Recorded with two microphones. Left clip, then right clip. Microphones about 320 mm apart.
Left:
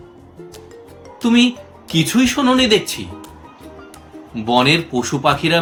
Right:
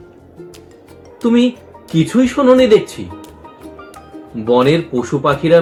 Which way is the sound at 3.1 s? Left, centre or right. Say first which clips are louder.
Right 2 dB; centre.